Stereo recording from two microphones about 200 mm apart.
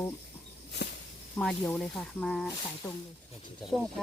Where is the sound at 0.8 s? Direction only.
55° left (ahead or behind).